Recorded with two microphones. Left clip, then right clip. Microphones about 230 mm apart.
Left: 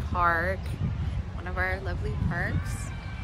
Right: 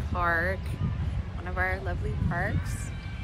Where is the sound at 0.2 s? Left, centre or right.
Centre.